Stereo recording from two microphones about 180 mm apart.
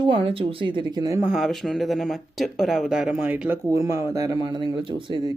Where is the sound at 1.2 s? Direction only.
Centre (ahead or behind).